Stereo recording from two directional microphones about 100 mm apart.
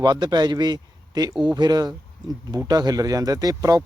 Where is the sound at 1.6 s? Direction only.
45° right (ahead or behind).